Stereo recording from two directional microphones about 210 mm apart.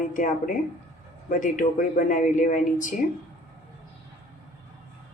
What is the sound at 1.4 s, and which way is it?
Speech, 40° left (ahead or behind).